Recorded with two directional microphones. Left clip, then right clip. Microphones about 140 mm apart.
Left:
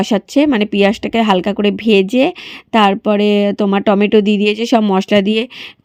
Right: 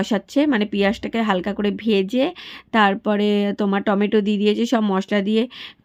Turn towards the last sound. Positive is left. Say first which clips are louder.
# left 6 dB
turn(degrees=40)  # may be behind; listen again after turning